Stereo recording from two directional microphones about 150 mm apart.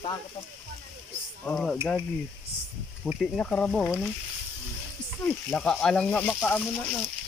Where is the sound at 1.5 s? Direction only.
5° left (ahead or behind).